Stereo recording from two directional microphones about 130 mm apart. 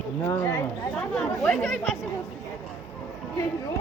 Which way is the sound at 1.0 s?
5° left (ahead or behind).